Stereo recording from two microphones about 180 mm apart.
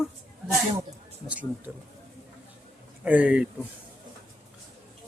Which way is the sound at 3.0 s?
5° right (ahead or behind).